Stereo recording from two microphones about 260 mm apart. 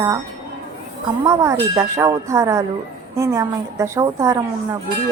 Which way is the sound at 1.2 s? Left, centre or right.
Centre.